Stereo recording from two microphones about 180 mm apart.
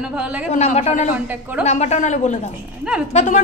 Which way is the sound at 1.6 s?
40° left (ahead or behind).